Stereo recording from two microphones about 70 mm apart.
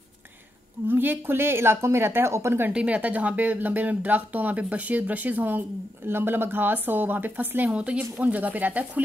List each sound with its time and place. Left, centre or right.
0.8 s speech: right
2.7 s speech: centre